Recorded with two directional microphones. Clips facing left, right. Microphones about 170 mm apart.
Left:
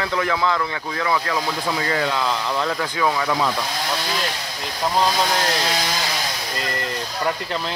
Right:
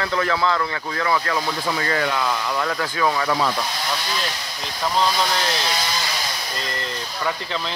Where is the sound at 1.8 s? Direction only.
20° left (ahead or behind).